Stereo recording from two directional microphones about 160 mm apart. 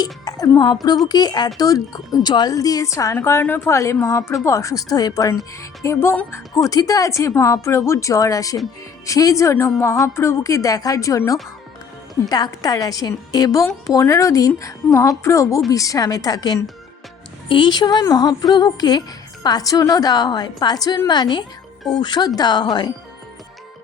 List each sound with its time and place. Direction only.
0.0 s a woman's voice: 25° left (ahead or behind)